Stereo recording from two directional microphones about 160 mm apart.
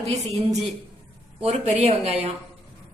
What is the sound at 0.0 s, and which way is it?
A woman's voice, 40° right (ahead or behind).